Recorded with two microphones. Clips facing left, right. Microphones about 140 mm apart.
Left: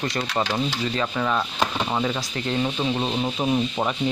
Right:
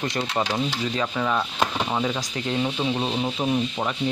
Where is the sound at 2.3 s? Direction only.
10° right (ahead or behind).